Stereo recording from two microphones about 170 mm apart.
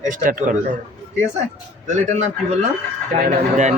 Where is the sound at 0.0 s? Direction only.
50° right (ahead or behind).